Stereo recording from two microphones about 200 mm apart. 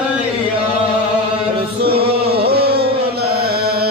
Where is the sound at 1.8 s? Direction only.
55° right (ahead or behind).